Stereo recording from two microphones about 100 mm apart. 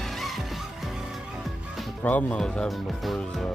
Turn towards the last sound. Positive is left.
turn(degrees=5)  # may be behind; listen again after turning